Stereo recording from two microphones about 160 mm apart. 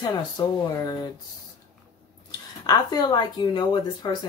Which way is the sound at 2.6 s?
25° left (ahead or behind).